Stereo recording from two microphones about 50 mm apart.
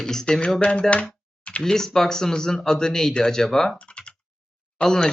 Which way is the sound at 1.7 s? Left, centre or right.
Centre.